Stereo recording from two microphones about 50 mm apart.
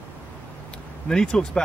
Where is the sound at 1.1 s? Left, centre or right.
Centre.